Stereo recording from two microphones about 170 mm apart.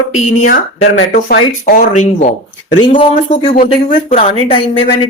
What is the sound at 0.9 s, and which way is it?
Speech, 65° left (ahead or behind).